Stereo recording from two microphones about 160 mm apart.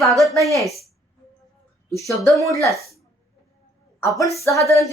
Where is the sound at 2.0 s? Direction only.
20° left (ahead or behind).